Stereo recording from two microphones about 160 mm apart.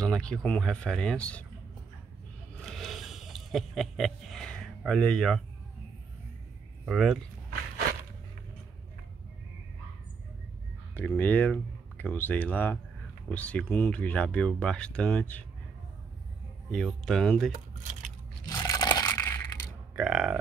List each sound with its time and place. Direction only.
0.0 s speech: 5° left (ahead or behind)
2.6 s a sound: centre (ahead or behind)
6.9 s speech: centre (ahead or behind)
11.0 s speech: 10° left (ahead or behind)
16.7 s speech: centre (ahead or behind)
18.5 s a sound: 20° left (ahead or behind)
20.0 s speech: 5° right (ahead or behind)